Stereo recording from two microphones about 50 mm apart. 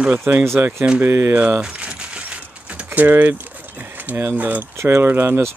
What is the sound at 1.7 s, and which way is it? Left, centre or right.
Keys jangling, right.